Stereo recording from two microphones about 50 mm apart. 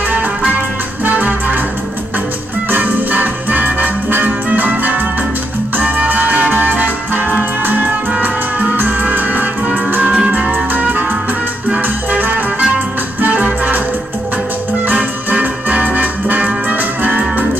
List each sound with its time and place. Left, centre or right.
1.0 s music: right
2.7 s music: right
10.0 s music: right
14.9 s music: right